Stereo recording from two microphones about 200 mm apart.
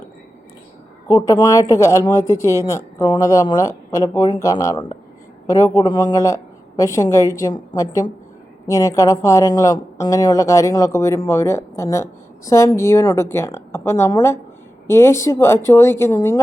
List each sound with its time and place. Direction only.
1.0 s speech: 15° left (ahead or behind)
2.2 s speech: 15° right (ahead or behind)
2.6 s speech: 20° left (ahead or behind)